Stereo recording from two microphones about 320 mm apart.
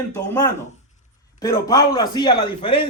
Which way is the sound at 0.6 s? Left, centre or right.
Left.